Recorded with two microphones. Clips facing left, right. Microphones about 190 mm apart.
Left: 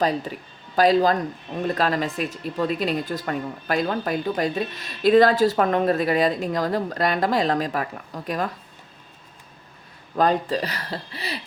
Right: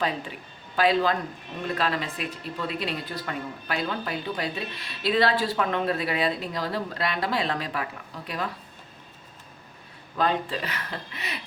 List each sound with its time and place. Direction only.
0.0 s speech: 40° left (ahead or behind)
10.2 s speech: 40° left (ahead or behind)